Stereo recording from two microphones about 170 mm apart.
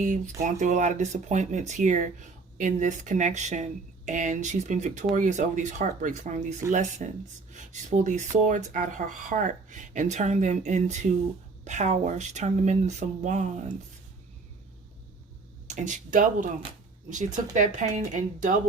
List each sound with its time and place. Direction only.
0.6 s speech: 45° right (ahead or behind)
15.6 s speech: 45° right (ahead or behind)